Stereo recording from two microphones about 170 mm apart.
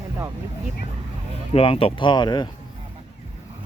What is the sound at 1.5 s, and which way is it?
Speech, 35° left (ahead or behind).